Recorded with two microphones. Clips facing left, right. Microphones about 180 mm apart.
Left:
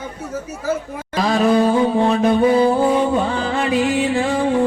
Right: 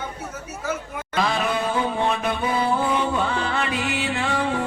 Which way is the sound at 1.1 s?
40° left (ahead or behind).